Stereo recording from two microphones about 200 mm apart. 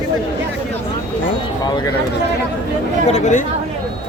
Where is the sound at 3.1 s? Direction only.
40° left (ahead or behind).